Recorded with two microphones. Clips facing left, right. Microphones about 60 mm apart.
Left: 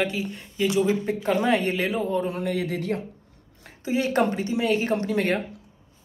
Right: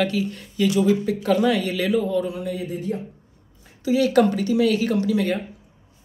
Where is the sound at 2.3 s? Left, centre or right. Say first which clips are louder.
Left 1 dB; left.